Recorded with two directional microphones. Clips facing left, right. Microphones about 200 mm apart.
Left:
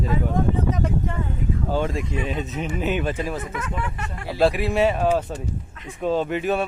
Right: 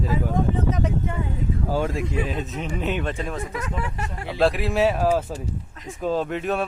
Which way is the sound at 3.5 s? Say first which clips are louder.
Even; 35° right (ahead or behind).